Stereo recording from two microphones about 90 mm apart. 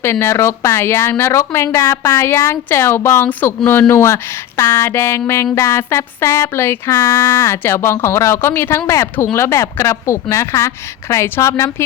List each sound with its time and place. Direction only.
0.0 s speech: 25° left (ahead or behind)
6.9 s speech: 40° left (ahead or behind)
7.3 s speech: 30° left (ahead or behind)